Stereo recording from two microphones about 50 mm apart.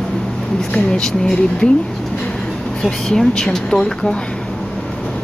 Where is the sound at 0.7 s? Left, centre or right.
Centre.